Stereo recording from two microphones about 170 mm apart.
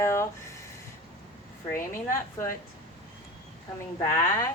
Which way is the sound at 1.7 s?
15° left (ahead or behind).